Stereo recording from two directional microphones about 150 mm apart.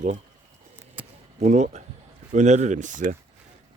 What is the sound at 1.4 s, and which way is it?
Speech, 50° right (ahead or behind).